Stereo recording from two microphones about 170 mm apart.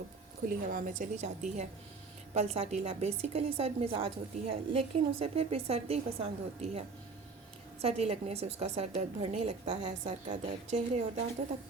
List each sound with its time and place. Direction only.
0.4 s a woman's voice: 55° right (ahead or behind)
2.3 s a woman's voice: 40° right (ahead or behind)